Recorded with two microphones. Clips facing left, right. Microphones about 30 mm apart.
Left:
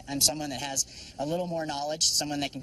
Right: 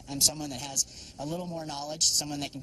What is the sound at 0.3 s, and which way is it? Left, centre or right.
Speech, left.